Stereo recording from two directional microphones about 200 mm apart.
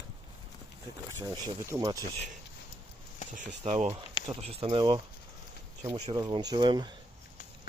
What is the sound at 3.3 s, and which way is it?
Speech, 35° right (ahead or behind).